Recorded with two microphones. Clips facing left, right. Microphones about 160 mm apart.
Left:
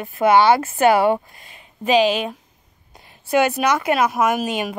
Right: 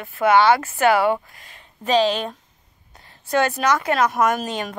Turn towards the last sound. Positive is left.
turn(degrees=10)  # may be behind; listen again after turning